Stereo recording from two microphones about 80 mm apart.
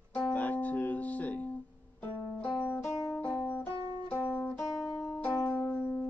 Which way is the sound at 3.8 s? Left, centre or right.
Right.